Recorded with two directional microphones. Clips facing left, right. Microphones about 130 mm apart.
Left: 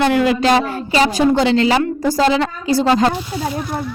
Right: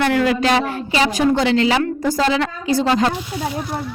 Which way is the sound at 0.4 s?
35° left (ahead or behind).